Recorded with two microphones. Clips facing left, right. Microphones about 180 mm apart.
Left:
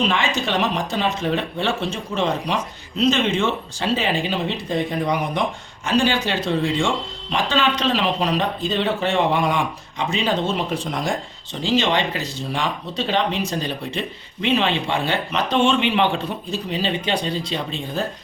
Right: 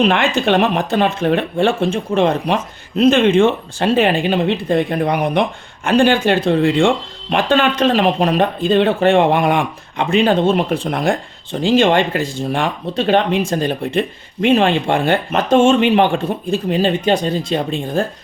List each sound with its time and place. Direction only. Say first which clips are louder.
0.0 s speech: right 7 dB; 60° right (ahead or behind)